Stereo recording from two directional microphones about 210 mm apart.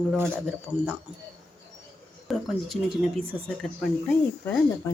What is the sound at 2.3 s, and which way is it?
Speech, centre (ahead or behind).